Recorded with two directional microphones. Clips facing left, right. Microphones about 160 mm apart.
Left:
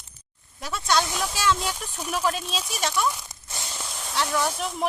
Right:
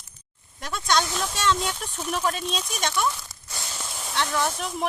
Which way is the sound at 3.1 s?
15° left (ahead or behind).